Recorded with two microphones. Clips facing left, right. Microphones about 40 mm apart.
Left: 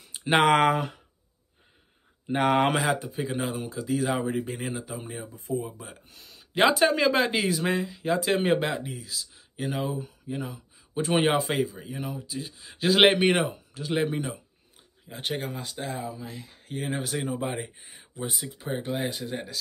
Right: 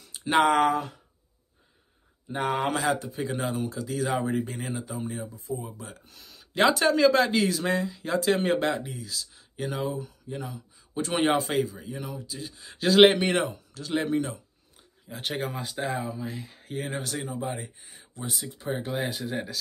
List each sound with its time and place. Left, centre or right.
0.0 s a sound: left
0.5 s speech: left
2.2 s speech: left
2.8 s speech: centre
6.5 s speech: centre
9.9 s speech: left
10.3 s speech: centre
15.0 s speech: centre
17.0 s speech: centre
17.3 s speech: left
18.3 s speech: centre